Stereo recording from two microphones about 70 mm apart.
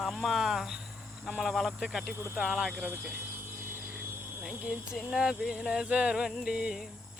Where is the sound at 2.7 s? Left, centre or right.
Right.